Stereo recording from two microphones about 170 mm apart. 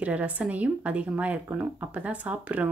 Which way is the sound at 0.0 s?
10° right (ahead or behind).